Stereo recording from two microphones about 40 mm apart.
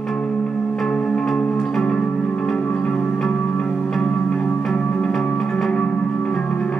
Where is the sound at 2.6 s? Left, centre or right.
Left.